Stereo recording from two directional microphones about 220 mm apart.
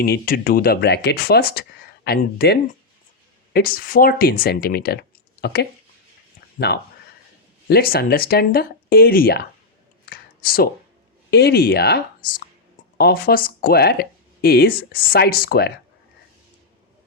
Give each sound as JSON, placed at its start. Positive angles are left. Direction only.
{"t": 0.0, "sound": "speech", "side_deg": 45}
{"t": 7.7, "sound": "speech", "side_deg": 45}
{"t": 10.1, "sound": "a sound", "side_deg": 45}
{"t": 11.3, "sound": "speech", "side_deg": 45}